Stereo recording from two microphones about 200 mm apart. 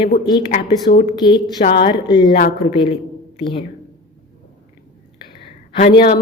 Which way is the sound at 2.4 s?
55° left (ahead or behind).